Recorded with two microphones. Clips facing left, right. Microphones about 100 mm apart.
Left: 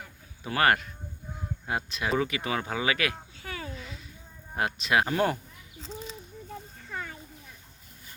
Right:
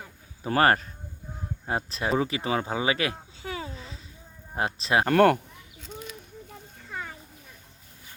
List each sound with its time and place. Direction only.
0.4 s speech: 35° right (ahead or behind)
5.0 s speech: 65° right (ahead or behind)